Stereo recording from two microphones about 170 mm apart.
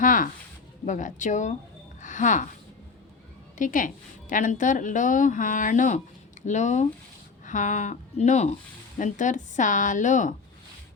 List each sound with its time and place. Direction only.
0.0 s a sound: 50° left (ahead or behind)
0.9 s a woman's voice: 45° left (ahead or behind)
3.6 s a woman's voice: 50° left (ahead or behind)